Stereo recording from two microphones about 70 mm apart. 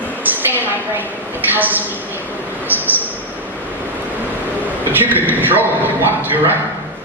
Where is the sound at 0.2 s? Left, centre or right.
Right.